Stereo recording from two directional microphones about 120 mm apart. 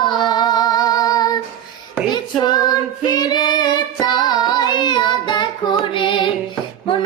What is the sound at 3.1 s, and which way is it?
Child singing, 35° left (ahead or behind).